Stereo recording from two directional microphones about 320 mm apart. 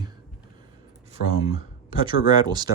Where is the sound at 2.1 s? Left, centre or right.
Centre.